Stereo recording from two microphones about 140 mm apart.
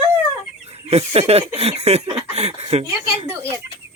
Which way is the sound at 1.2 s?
45° right (ahead or behind).